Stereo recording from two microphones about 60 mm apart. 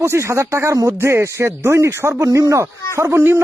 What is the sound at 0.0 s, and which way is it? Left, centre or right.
Speech, right.